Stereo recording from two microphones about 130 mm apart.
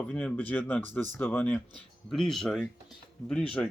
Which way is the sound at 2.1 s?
5° left (ahead or behind).